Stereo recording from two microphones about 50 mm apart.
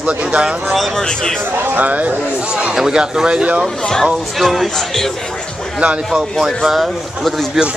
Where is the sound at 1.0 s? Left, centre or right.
Centre.